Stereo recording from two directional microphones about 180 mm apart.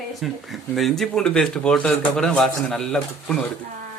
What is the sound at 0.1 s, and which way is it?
Speech, centre (ahead or behind).